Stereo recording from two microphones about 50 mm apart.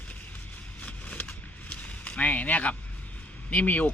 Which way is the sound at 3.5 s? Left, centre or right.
Left.